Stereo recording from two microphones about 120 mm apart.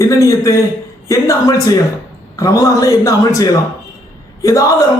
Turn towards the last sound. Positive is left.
turn(degrees=25)  # may be behind; listen again after turning